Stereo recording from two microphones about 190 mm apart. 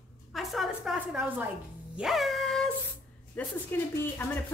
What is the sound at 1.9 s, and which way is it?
Music, centre (ahead or behind).